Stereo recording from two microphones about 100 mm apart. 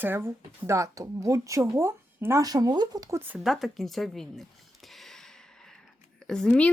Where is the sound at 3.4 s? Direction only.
Centre (ahead or behind).